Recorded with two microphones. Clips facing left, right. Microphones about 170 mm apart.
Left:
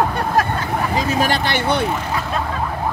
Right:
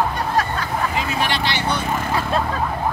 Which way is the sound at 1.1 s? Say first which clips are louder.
Left 4 dB; 45° left (ahead or behind).